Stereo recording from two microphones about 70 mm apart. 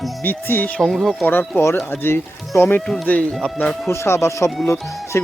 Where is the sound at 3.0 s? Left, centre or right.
Centre.